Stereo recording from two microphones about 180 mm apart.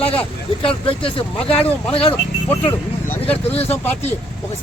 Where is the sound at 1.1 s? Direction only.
30° left (ahead or behind).